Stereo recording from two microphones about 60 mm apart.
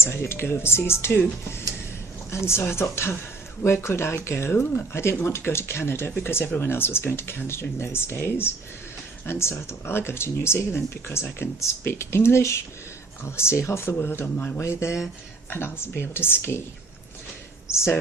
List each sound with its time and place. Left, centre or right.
0.0 s speech: left
2.3 s speech: left
14.6 s speech: left
17.7 s speech: left